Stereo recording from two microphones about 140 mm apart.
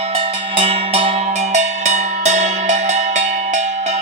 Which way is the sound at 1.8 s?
55° right (ahead or behind).